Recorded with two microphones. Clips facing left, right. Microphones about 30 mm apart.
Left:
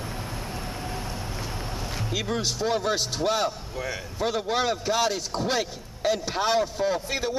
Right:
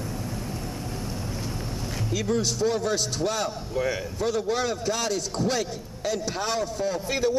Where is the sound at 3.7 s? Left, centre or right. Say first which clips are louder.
Right 5 dB; centre.